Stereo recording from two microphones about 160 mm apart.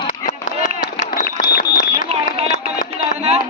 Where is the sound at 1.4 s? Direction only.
65° left (ahead or behind).